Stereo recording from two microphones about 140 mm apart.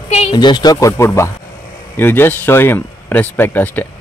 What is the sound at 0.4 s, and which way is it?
Speech, 30° left (ahead or behind).